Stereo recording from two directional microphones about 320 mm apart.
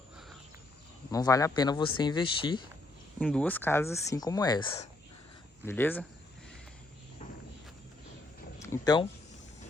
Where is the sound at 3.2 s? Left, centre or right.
Centre.